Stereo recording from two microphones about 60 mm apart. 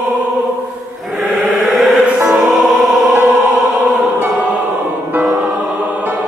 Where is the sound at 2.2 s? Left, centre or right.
Centre.